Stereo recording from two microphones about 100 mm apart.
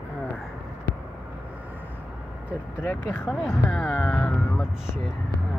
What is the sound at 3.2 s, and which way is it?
Speech, 5° right (ahead or behind).